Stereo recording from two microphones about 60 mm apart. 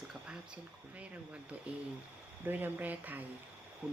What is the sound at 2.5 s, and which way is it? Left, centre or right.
Speech, right.